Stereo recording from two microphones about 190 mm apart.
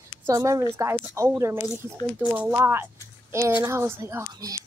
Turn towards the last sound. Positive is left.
turn(degrees=-15)  # may be behind; listen again after turning